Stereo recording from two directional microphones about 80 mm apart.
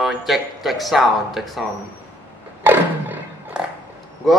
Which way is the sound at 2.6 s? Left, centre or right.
Right.